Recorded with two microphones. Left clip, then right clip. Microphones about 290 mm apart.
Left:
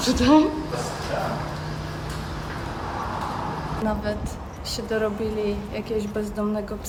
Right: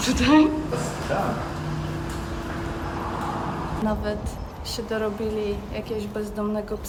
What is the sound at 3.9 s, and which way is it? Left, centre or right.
Speech, centre.